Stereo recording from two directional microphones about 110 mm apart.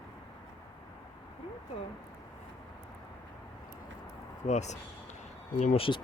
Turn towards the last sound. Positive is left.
turn(degrees=90)